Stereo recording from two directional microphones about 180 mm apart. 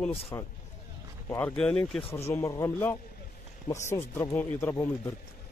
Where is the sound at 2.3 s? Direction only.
15° left (ahead or behind).